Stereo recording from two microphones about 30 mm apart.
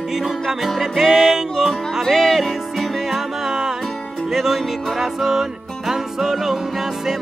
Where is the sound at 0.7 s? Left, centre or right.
Centre.